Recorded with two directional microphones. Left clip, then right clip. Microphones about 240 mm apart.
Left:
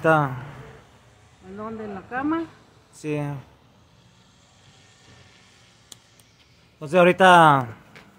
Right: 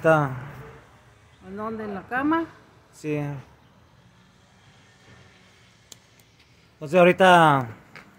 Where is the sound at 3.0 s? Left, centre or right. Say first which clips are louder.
Left 1 dB; centre.